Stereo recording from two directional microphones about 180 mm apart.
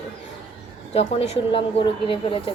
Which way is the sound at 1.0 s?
35° left (ahead or behind).